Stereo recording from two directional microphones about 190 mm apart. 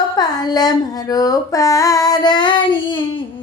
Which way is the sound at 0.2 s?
20° left (ahead or behind).